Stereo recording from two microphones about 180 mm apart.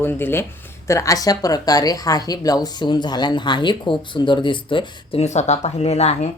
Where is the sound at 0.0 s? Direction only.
10° left (ahead or behind); by 6.3 s 35° left (ahead or behind).